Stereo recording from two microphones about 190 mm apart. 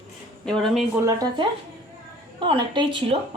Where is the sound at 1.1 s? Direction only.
20° right (ahead or behind).